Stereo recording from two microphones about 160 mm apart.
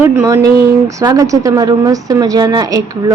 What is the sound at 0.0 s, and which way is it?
Speech, 10° right (ahead or behind).